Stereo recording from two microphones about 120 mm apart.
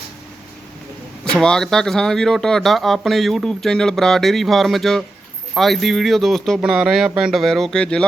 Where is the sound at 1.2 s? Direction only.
5° left (ahead or behind).